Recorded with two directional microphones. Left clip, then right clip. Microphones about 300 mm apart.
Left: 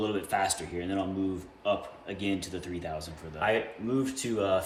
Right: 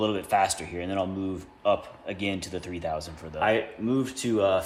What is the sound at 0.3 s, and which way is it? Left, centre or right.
Speech, right.